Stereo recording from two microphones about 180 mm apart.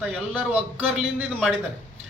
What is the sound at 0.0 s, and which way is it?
A man's voice, 5° right (ahead or behind).